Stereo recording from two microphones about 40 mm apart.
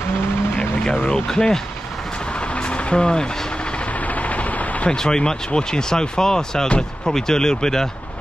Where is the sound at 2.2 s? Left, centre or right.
Left.